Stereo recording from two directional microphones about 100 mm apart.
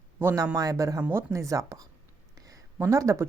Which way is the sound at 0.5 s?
35° right (ahead or behind).